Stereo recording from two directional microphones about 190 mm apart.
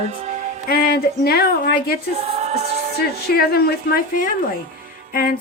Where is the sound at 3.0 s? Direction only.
55° left (ahead or behind).